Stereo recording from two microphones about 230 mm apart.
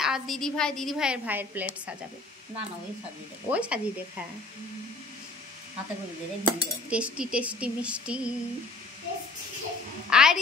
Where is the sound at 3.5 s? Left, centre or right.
Centre.